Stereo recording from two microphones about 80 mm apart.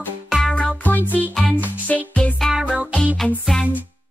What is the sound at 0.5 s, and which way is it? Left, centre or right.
Music, centre.